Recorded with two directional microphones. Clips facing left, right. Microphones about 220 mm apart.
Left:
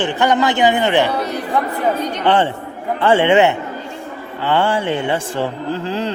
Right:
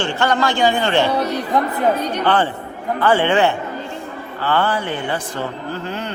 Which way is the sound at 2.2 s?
25° left (ahead or behind).